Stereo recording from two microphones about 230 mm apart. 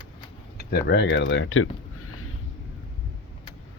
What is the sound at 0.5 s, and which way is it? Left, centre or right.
Speech, left.